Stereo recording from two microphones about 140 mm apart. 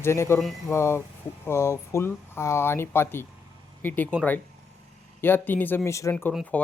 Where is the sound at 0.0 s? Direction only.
20° left (ahead or behind).